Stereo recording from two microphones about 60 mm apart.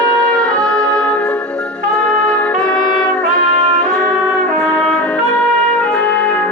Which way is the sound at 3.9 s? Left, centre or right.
Centre.